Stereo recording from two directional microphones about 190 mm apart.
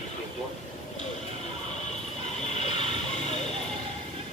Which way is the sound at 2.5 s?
35° left (ahead or behind).